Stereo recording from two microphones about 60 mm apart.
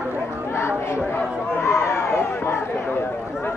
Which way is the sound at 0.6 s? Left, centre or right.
Left.